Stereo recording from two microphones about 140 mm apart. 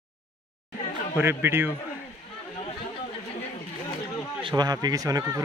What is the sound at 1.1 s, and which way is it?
Speech, 15° right (ahead or behind).